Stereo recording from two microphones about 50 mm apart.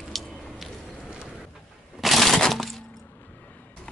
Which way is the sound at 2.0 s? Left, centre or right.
Centre.